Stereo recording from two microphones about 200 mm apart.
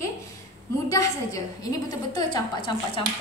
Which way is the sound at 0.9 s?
15° left (ahead or behind).